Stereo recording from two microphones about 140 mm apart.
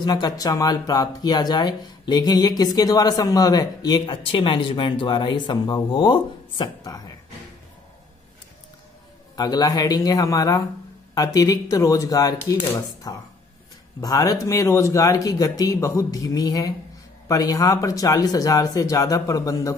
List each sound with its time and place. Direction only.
0.0 s speech: 30° left (ahead or behind)
9.3 s speech: 30° left (ahead or behind)